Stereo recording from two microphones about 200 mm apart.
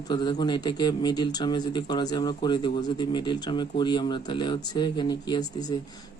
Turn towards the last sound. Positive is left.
turn(degrees=20)  # may be behind; listen again after turning